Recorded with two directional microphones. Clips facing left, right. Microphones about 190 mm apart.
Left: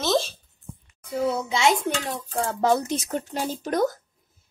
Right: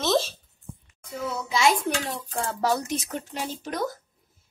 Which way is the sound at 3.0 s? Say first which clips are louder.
Left 4 dB; 45° left (ahead or behind).